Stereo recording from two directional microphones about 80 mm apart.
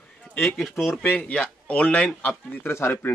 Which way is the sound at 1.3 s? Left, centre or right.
Centre.